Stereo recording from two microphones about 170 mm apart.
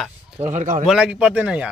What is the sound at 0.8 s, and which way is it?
Speech, 5° right (ahead or behind).